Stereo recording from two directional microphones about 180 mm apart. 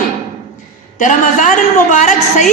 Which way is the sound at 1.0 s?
45° left (ahead or behind).